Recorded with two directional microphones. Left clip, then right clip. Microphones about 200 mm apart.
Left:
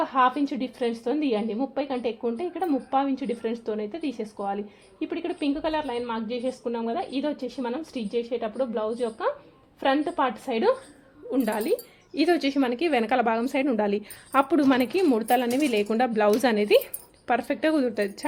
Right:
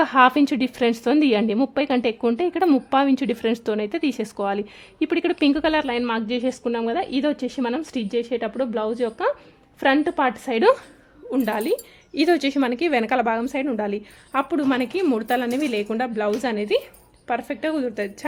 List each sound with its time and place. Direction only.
0.0 s a woman's voice: 35° right (ahead or behind)
11.3 s a woman's voice: 20° right (ahead or behind); by 18.3 s centre (ahead or behind)